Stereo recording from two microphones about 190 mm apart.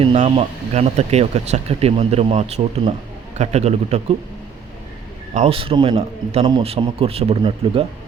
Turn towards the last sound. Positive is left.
turn(degrees=-30)  # may be behind; listen again after turning